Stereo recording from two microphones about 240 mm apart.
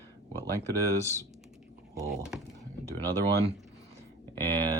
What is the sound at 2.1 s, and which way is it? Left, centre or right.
Speech, centre.